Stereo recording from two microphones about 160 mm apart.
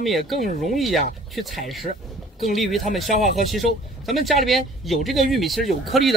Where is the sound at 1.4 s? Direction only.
Centre (ahead or behind).